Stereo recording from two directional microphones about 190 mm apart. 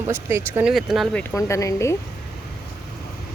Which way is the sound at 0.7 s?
Centre (ahead or behind).